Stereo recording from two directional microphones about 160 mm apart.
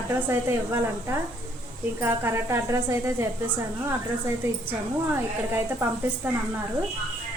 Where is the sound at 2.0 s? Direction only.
15° right (ahead or behind).